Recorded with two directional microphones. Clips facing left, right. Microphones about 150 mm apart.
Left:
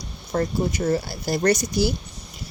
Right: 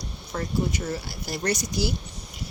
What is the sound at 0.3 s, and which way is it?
A woman's voice, 45° left (ahead or behind).